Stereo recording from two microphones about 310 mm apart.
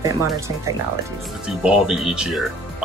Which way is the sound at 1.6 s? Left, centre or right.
Centre.